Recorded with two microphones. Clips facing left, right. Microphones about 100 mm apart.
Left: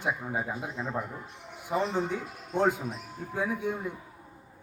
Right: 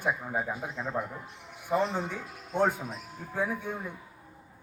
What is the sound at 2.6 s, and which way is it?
Speech, 15° left (ahead or behind).